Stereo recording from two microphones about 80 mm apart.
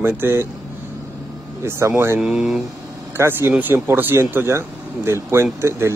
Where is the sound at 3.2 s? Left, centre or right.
Right.